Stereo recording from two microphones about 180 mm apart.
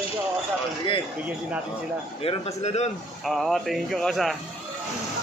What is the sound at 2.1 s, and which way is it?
Speech, 35° left (ahead or behind).